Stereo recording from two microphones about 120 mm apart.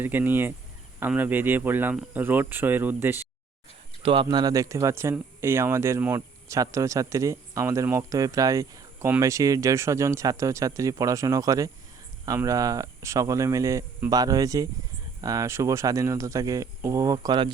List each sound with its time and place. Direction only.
0.0 s speech: 15° right (ahead or behind)
4.0 s speech: 45° right (ahead or behind)